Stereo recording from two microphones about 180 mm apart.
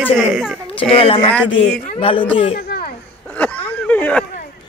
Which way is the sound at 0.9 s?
30° left (ahead or behind).